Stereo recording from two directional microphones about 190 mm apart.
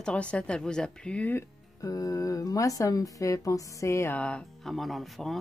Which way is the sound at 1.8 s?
20° left (ahead or behind).